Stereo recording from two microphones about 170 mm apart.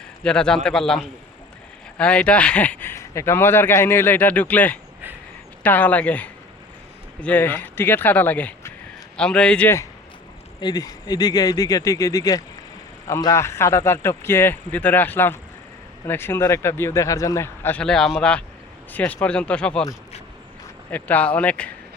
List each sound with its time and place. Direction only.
0.2 s a man's voice: 5° left (ahead or behind)
10.6 s speech: 25° left (ahead or behind); by 19.8 s 5° left (ahead or behind)
20.9 s speech: 10° left (ahead or behind)